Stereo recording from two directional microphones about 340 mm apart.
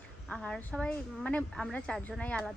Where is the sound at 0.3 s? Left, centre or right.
Centre.